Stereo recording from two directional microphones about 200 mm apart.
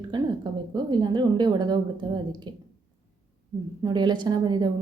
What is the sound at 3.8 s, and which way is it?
Speech, 20° right (ahead or behind).